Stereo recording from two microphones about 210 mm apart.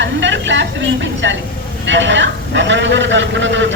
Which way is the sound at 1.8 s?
60° right (ahead or behind).